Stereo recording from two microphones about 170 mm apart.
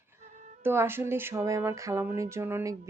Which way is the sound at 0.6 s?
15° right (ahead or behind).